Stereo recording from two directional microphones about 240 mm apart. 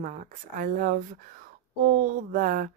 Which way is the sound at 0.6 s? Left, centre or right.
Right.